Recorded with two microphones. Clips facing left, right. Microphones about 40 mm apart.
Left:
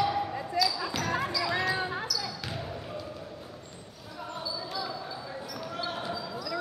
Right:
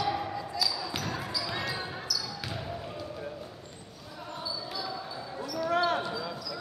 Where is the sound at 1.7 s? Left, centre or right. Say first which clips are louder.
Left 5 dB; left.